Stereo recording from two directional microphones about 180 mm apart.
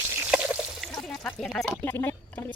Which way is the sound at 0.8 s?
Centre (ahead or behind).